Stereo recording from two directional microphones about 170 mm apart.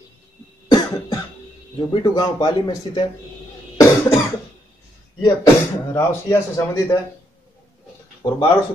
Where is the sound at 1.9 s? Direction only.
25° left (ahead or behind).